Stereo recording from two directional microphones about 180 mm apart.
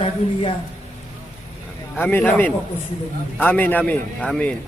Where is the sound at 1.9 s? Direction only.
10° left (ahead or behind).